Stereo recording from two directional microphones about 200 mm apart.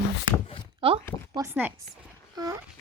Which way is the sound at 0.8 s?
30° right (ahead or behind).